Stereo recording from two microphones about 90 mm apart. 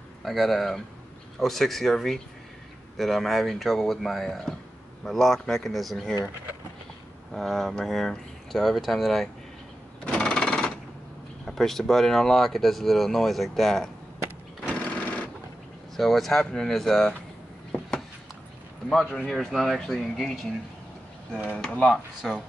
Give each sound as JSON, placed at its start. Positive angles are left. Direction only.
{"t": 0.2, "sound": "speech", "side_deg": 0}
{"t": 7.3, "sound": "speech", "side_deg": 0}
{"t": 10.0, "sound": "jackhammer", "side_deg": 10}
{"t": 11.4, "sound": "speech", "side_deg": 5}
{"t": 14.9, "sound": "sewing machine", "side_deg": 15}
{"t": 16.0, "sound": "speech", "side_deg": 5}
{"t": 19.0, "sound": "speech", "side_deg": 10}
{"t": 19.3, "sound": "speech", "side_deg": 0}
{"t": 21.5, "sound": "speech", "side_deg": 15}
{"t": 21.9, "sound": "speech", "side_deg": 0}